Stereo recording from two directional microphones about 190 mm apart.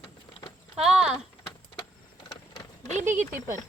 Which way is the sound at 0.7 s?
5° right (ahead or behind).